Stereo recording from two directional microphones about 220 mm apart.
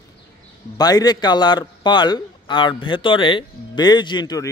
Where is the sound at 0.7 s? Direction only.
15° left (ahead or behind).